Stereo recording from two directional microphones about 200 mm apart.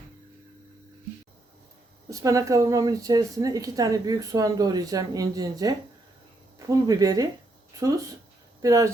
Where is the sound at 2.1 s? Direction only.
15° right (ahead or behind).